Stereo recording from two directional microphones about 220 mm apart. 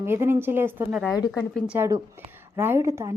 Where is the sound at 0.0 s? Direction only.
10° right (ahead or behind).